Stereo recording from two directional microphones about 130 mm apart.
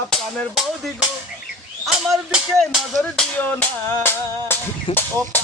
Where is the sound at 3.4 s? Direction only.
15° left (ahead or behind).